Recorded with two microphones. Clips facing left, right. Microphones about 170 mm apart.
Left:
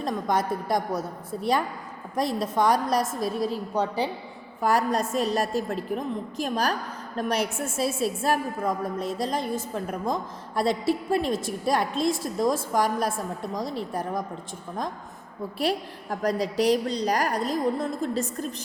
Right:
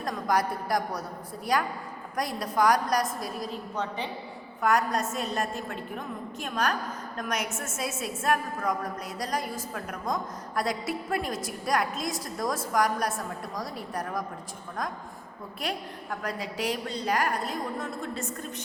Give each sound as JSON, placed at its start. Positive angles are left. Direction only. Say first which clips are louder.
{"t": 0.0, "sound": "a woman's voice", "louder": "left 2 dB", "side_deg": 25}
{"t": 15.5, "sound": "a woman's voice", "louder": "left 7 dB", "side_deg": 35}